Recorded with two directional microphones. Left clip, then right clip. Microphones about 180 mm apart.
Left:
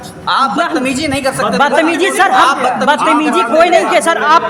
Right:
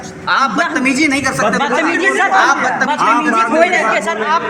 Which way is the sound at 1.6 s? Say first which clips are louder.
Left 3 dB; 45° left (ahead or behind).